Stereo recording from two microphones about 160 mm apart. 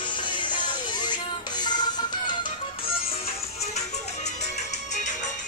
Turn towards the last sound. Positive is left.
turn(degrees=45)  # may be behind; listen again after turning